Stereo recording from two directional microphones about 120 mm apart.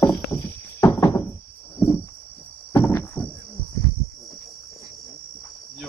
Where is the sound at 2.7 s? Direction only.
20° left (ahead or behind).